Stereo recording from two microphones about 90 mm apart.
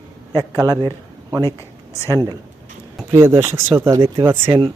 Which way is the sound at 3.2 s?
30° right (ahead or behind).